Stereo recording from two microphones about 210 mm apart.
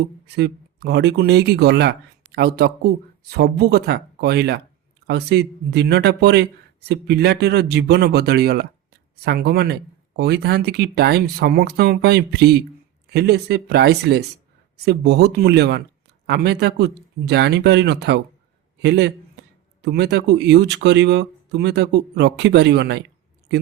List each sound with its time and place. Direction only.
0.3 s a man's voice: 50° right (ahead or behind)